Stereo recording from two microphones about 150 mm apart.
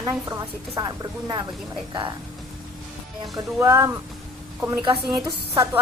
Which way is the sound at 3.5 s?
20° right (ahead or behind).